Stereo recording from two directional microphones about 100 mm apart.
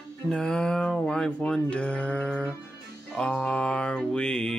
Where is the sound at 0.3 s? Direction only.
5° left (ahead or behind).